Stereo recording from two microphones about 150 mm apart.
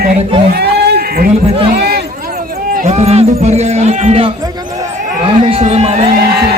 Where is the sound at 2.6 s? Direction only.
65° right (ahead or behind).